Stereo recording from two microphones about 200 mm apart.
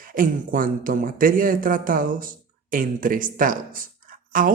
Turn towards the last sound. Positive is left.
turn(degrees=-45)  # may be behind; listen again after turning